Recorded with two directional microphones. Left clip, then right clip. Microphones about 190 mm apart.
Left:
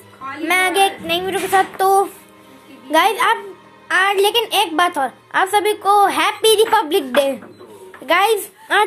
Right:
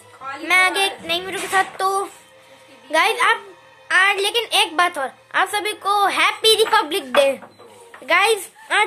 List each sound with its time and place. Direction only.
0.5 s a woman's voice: centre (ahead or behind)
8.1 s speech: centre (ahead or behind)